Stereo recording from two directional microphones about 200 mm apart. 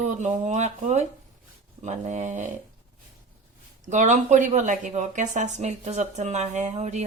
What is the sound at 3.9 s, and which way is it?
Speech, 35° right (ahead or behind).